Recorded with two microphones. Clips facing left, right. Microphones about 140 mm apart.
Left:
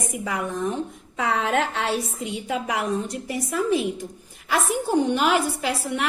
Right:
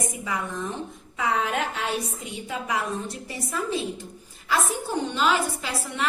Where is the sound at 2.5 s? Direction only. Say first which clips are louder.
Left 3 dB; 75° left (ahead or behind).